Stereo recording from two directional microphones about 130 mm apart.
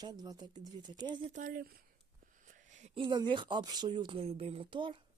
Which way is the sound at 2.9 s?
35° right (ahead or behind).